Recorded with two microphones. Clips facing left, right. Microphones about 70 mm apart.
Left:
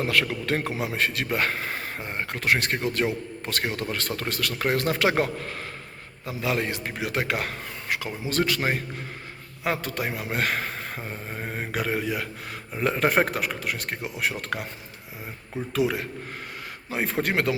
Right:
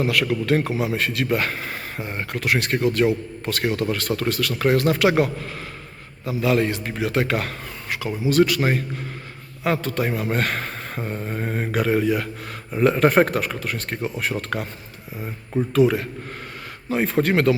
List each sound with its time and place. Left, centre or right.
0.0 s a man's voice: left
6.4 s a man's voice: left
16.9 s speech: centre